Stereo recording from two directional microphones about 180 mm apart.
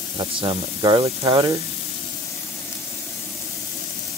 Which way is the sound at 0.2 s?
30° right (ahead or behind).